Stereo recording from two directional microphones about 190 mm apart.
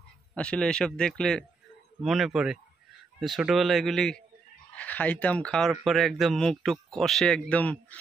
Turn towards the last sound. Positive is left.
turn(degrees=5)  # may be behind; listen again after turning